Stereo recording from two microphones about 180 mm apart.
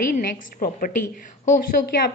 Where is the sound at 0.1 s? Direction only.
55° left (ahead or behind).